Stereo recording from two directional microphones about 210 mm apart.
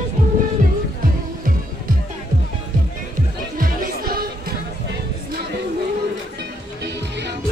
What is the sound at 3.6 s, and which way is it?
Music, 45° right (ahead or behind).